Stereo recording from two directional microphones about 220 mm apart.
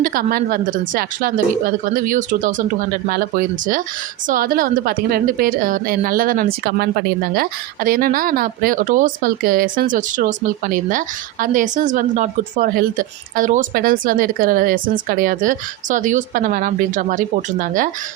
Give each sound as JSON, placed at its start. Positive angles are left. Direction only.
{"t": 0.0, "sound": "a woman's voice", "side_deg": -40}